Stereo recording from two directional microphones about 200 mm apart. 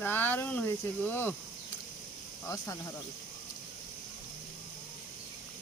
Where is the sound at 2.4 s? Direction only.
15° left (ahead or behind).